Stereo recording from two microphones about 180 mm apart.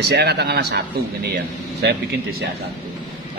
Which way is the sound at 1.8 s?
70° right (ahead or behind).